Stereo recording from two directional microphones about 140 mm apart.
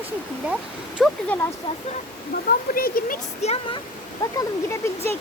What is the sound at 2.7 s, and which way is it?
Speech, 90° left.